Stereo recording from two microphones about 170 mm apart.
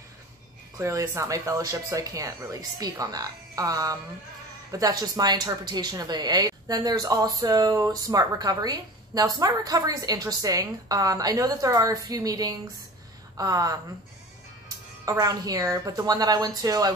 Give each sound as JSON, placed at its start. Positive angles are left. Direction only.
{"t": 0.7, "sound": "a woman's voice", "side_deg": -15}
{"t": 15.0, "sound": "a woman's voice", "side_deg": -20}